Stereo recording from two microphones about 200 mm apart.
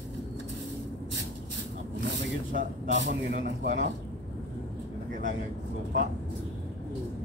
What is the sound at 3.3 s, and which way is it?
Speech, 45° right (ahead or behind).